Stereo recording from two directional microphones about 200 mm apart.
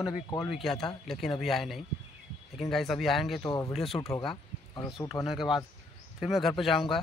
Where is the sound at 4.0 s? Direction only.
20° left (ahead or behind).